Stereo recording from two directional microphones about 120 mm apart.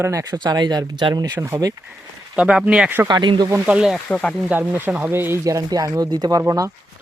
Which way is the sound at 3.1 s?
40° right (ahead or behind).